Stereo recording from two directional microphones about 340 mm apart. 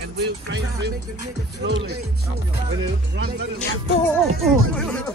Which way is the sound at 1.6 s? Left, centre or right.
Right.